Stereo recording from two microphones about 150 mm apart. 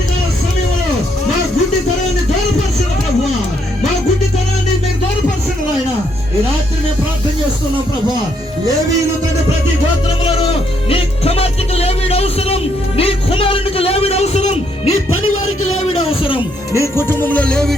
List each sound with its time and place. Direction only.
10.8 s music: 40° left (ahead or behind)
15.6 s a sound: 40° left (ahead or behind)
16.8 s music: 15° left (ahead or behind)